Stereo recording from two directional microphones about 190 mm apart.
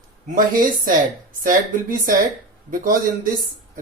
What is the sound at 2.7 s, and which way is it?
Speech, 45° right (ahead or behind).